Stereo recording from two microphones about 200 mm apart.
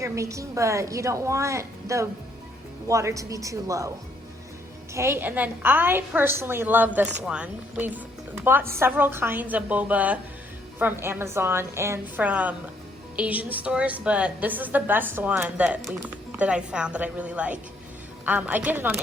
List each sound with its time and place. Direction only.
0.0 s a woman's voice: 15° right (ahead or behind)
4.9 s a woman's voice: 10° right (ahead or behind)